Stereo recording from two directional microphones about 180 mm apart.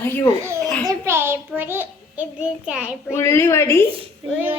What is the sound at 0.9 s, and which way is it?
A child's voice, 15° right (ahead or behind).